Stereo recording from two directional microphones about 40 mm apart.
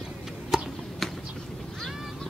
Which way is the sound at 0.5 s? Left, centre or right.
Centre.